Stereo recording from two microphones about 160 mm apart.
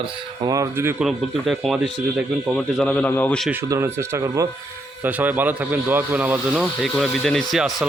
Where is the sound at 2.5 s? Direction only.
5° left (ahead or behind).